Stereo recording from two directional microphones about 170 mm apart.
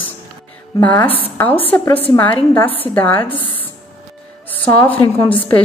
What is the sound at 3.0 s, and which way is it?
Speech, 10° left (ahead or behind).